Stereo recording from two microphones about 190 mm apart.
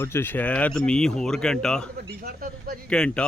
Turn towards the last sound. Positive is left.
turn(degrees=5)  # may be behind; listen again after turning